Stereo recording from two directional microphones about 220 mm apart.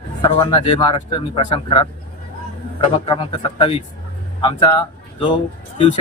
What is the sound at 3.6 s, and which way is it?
A man's voice, 25° left (ahead or behind).